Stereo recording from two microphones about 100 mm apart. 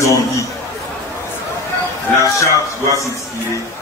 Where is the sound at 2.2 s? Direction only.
30° left (ahead or behind).